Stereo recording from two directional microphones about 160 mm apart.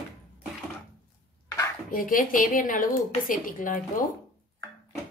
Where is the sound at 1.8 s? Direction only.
60° left (ahead or behind).